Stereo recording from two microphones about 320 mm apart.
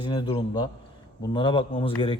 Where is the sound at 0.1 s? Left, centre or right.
Centre.